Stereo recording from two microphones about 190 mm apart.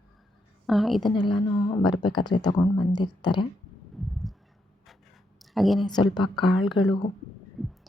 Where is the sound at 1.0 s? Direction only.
25° left (ahead or behind).